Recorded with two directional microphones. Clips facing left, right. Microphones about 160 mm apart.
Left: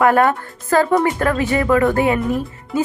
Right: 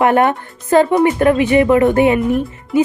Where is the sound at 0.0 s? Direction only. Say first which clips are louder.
Right 1 dB; 20° right (ahead or behind).